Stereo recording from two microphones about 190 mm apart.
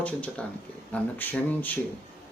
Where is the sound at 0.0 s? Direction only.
5° left (ahead or behind).